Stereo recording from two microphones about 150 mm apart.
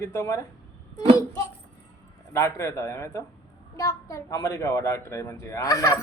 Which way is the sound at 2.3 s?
20° left (ahead or behind).